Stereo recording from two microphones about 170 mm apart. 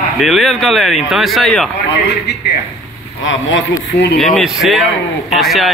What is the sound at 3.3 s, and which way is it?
Speech, 90° left.